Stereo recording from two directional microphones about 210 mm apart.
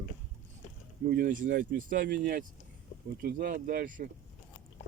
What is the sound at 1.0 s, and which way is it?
Speech, 45° right (ahead or behind).